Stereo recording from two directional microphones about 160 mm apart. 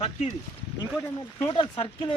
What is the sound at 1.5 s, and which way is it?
Speech, 35° left (ahead or behind).